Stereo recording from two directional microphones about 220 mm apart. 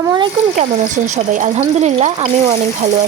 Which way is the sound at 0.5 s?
35° right (ahead or behind).